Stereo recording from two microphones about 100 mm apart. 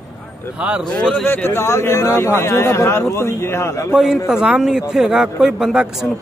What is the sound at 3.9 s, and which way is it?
A man's voice, 5° right (ahead or behind).